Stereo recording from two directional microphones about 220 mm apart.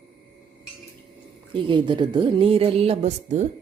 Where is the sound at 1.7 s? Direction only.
20° right (ahead or behind).